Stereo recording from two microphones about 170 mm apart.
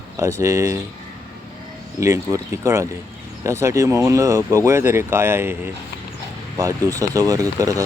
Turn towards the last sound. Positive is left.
turn(degrees=-20)  # may be behind; listen again after turning